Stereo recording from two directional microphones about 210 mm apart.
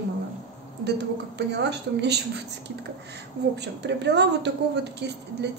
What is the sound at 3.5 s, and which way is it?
A woman's voice, 55° right (ahead or behind).